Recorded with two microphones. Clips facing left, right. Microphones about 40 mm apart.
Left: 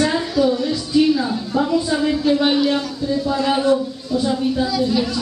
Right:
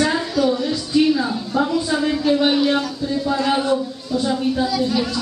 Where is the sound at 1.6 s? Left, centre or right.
Centre.